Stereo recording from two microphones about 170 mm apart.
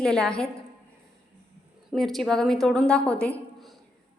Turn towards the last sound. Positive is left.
turn(degrees=5)  # may be behind; listen again after turning